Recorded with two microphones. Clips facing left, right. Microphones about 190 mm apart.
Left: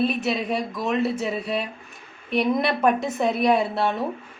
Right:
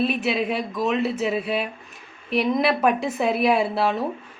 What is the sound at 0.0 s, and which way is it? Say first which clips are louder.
A woman's voice: right 1 dB; centre (ahead or behind).